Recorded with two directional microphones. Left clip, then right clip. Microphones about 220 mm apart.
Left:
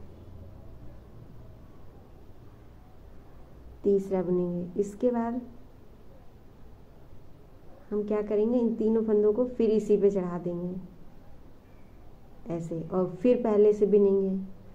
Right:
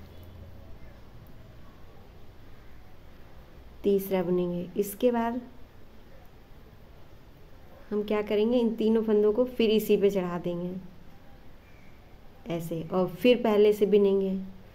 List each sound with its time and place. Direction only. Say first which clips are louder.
3.8 s a woman's voice: even; 20° right (ahead or behind)
8.0 s a woman's voice: even; 25° right (ahead or behind)
10.1 s a woman's voice: right 1 dB; 35° right (ahead or behind)
12.4 s a woman's voice: right 1 dB; 20° right (ahead or behind)